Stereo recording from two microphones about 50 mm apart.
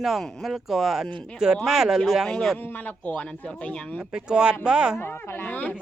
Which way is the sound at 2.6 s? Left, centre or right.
Left.